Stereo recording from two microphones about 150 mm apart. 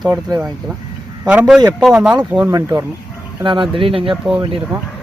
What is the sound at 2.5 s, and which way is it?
Speech, 20° right (ahead or behind).